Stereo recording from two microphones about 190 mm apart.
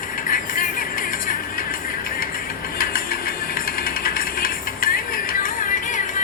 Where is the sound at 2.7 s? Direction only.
50° left (ahead or behind).